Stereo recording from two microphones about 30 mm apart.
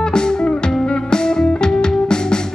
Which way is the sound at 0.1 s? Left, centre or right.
Left.